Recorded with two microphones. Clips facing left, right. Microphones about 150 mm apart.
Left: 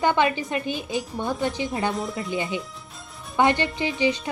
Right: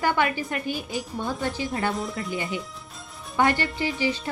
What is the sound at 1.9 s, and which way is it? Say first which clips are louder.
Speech: left 1 dB; centre (ahead or behind).